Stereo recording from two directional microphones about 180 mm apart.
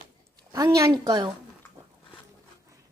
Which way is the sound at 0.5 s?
20° right (ahead or behind).